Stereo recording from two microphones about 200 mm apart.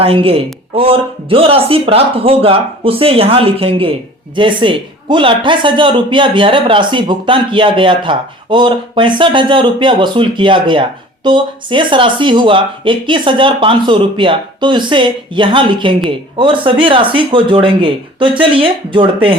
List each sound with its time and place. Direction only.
0.0 s a man's voice: 30° right (ahead or behind)